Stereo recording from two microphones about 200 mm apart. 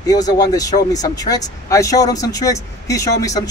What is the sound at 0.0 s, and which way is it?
Speech, 20° left (ahead or behind).